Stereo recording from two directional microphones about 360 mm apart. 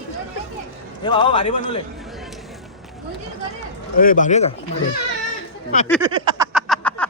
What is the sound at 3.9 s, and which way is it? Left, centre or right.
Speech, left.